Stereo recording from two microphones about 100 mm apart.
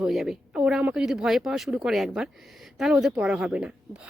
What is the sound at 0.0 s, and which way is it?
Speech, 5° right (ahead or behind).